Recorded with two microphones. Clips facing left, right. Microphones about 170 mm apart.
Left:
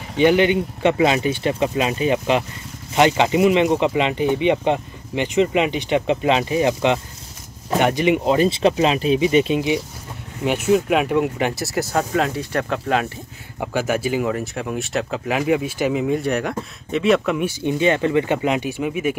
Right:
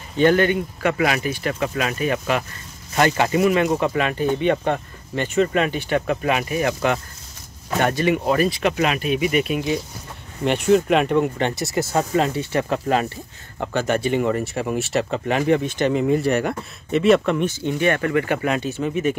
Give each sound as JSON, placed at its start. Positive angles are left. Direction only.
{"t": 0.2, "sound": "speech", "side_deg": 15}
{"t": 10.4, "sound": "speech", "side_deg": 5}